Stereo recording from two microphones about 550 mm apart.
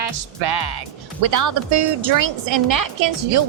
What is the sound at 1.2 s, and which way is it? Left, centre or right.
A woman's voice, right.